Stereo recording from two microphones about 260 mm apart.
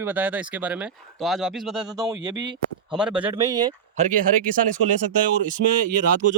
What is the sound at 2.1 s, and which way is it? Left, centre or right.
Speech, centre.